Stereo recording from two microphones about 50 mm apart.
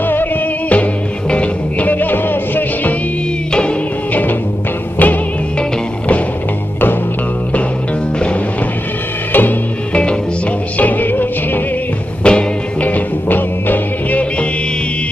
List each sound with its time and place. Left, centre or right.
0.0 s music: left
1.3 s music: left
4.1 s music: left
9.3 s music: left
10.8 s music: left
12.2 s music: centre
12.8 s music: left